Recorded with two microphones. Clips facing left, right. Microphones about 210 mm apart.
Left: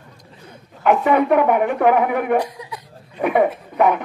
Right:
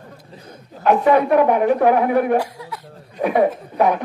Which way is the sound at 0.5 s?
40° right (ahead or behind).